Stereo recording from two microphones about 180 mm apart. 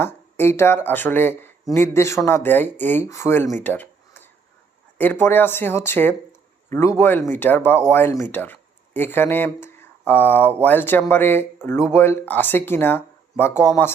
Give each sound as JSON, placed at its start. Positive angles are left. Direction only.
{"t": 0.0, "sound": "speech", "side_deg": 10}
{"t": 3.6, "sound": "a sound", "side_deg": 10}
{"t": 4.9, "sound": "speech", "side_deg": 10}